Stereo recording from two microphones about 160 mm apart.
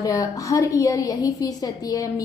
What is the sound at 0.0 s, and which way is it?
A woman's voice, 20° left (ahead or behind).